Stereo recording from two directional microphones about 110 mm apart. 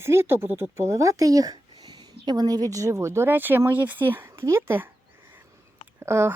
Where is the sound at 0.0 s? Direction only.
25° right (ahead or behind).